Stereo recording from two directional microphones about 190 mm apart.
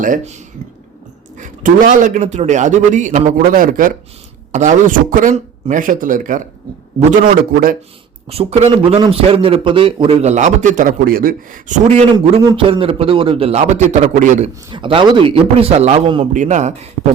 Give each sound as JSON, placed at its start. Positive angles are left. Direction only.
{"t": 0.0, "sound": "a man's voice", "side_deg": -45}
{"t": 1.4, "sound": "a man's voice", "side_deg": -45}
{"t": 8.3, "sound": "a man's voice", "side_deg": -30}
{"t": 12.1, "sound": "a man's voice", "side_deg": -20}
{"t": 14.7, "sound": "a man's voice", "side_deg": -25}